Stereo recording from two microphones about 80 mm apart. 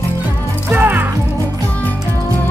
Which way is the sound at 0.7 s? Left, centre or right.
Right.